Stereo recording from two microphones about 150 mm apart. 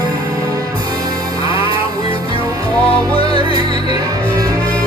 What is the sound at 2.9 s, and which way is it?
Music, 40° left (ahead or behind).